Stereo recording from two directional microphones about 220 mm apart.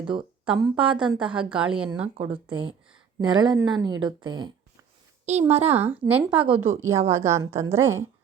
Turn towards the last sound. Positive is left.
turn(degrees=-10)  # may be behind; listen again after turning